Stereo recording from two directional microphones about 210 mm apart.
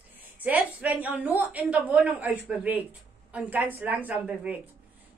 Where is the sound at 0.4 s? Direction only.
10° right (ahead or behind).